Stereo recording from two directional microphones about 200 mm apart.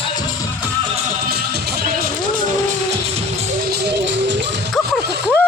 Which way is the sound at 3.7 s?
60° right (ahead or behind).